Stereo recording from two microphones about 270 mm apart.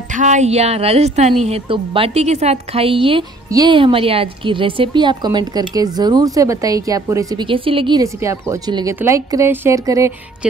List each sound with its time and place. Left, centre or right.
0.1 s a woman's voice: right; by 10.5 s centre